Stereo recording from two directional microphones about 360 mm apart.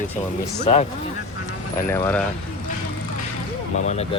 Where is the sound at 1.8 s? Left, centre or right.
Centre.